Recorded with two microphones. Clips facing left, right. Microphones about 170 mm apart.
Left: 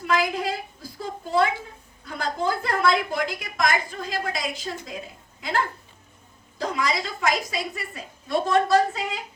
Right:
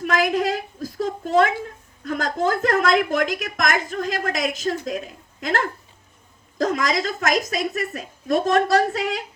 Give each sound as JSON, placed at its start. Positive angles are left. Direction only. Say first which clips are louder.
{"t": 0.2, "sound": "a sound", "louder": "right 5 dB", "side_deg": -90}
{"t": 2.0, "sound": "a woman's voice", "louder": "right 4 dB", "side_deg": -90}
{"t": 8.7, "sound": "speech", "louder": "right 2 dB", "side_deg": -75}